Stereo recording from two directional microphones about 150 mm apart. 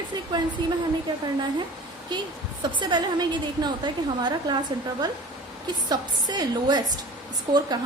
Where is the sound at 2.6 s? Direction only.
30° right (ahead or behind).